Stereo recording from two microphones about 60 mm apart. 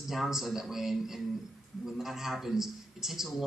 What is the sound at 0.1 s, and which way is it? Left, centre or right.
A man's voice, centre.